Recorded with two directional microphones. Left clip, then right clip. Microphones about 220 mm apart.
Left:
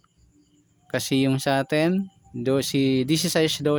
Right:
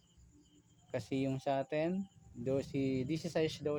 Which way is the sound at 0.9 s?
40° left (ahead or behind).